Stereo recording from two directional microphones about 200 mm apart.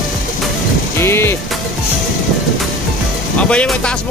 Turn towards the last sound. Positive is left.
turn(degrees=5)  # may be behind; listen again after turning